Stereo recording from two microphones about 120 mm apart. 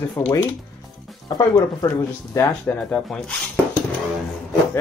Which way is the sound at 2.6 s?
5° left (ahead or behind).